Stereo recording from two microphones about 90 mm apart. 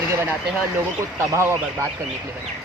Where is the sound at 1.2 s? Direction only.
35° right (ahead or behind).